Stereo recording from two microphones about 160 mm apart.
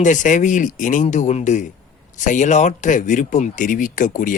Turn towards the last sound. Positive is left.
turn(degrees=55)  # may be behind; listen again after turning